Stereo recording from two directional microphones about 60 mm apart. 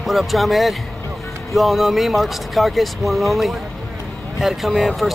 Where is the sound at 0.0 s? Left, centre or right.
Centre.